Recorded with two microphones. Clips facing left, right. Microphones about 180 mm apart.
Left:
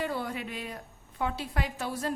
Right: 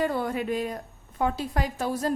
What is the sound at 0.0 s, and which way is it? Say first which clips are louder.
A woman's voice: right 6 dB; 50° right (ahead or behind).